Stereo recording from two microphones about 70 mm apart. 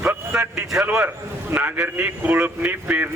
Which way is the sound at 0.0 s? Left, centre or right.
Right.